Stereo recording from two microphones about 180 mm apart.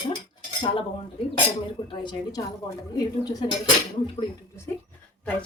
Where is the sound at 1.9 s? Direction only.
25° left (ahead or behind).